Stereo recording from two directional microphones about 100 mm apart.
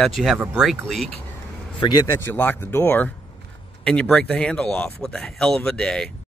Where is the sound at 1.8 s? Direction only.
45° left (ahead or behind).